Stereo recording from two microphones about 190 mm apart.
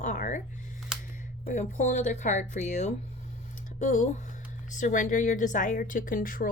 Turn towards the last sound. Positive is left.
turn(degrees=45)  # may be behind; listen again after turning